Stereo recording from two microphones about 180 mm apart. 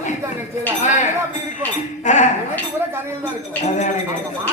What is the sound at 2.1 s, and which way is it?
Speech, 40° left (ahead or behind).